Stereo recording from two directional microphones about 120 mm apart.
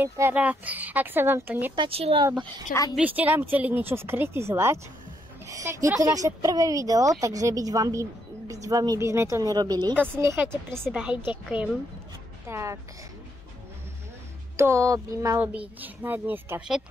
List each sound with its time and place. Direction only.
0.0 s speech: 15° right (ahead or behind)
1.8 s speech: 55° right (ahead or behind)
3.0 s speech: 15° right (ahead or behind); by 9.9 s 35° right (ahead or behind)
9.9 s speech: 20° right (ahead or behind)
10.9 s speech: 10° right (ahead or behind)
12.4 s speech: 25° right (ahead or behind)
14.6 s speech: 25° right (ahead or behind)
15.4 s speech: 10° right (ahead or behind)